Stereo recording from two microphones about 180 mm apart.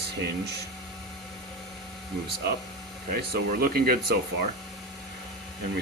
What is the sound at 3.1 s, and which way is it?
Speech, 55° right (ahead or behind).